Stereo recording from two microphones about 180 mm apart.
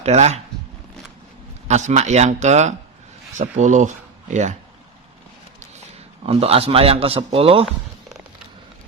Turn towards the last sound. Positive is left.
turn(degrees=-30)  # may be behind; listen again after turning